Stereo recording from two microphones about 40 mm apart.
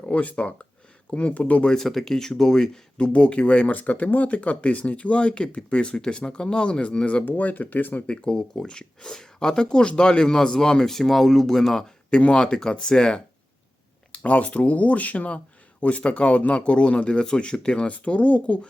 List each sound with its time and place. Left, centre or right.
0.0 s speech: left
1.8 s speech: centre
3.0 s speech: left
7.3 s speech: left
8.3 s speech: left
12.1 s speech: left
14.1 s speech: left